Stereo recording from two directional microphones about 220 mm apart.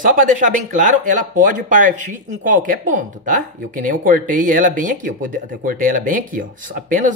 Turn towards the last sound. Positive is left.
turn(degrees=-40)  # may be behind; listen again after turning